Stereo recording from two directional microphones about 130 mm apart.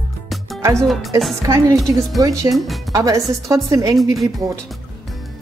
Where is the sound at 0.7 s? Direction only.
Centre (ahead or behind).